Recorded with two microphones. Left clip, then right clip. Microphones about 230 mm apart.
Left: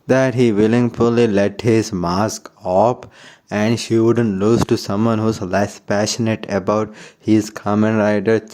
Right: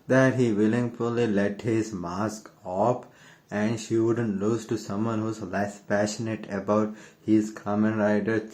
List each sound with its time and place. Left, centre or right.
0.1 s speech: left